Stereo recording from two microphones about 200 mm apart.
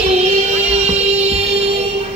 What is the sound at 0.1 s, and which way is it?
Music, 35° right (ahead or behind).